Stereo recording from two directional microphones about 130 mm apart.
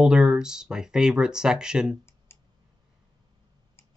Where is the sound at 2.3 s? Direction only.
20° left (ahead or behind).